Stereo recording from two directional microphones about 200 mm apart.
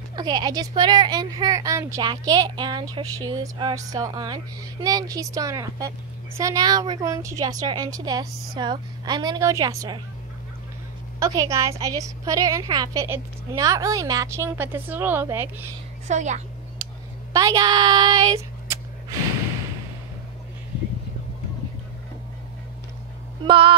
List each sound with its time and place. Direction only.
0.1 s a woman's voice: 20° right (ahead or behind)
11.1 s a woman's voice: 15° right (ahead or behind)
16.1 s a woman's voice: 35° right (ahead or behind)
17.3 s speech: 15° right (ahead or behind)
23.4 s speech: 25° right (ahead or behind)